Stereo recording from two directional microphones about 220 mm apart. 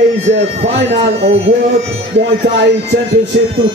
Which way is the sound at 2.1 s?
55° right (ahead or behind).